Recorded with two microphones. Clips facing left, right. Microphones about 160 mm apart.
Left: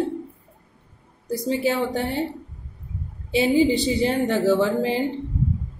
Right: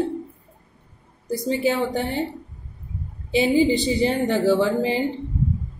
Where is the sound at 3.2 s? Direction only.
Centre (ahead or behind).